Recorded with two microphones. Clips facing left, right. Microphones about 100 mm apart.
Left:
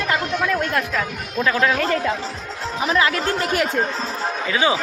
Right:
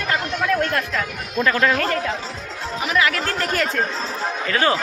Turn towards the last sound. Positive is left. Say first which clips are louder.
# even
turn(degrees=10)  # may be behind; listen again after turning